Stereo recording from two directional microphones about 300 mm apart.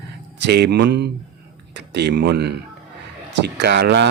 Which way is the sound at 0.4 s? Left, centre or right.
Right.